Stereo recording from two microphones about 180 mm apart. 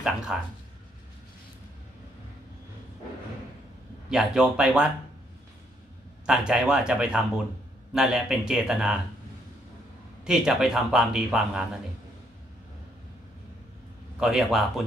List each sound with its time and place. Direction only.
0.0 s speech: 5° right (ahead or behind)
4.1 s speech: centre (ahead or behind)
6.2 s speech: 5° right (ahead or behind)
10.2 s speech: 5° right (ahead or behind)
14.2 s speech: centre (ahead or behind)